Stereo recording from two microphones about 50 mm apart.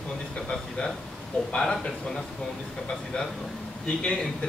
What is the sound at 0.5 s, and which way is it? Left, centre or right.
Speech, centre.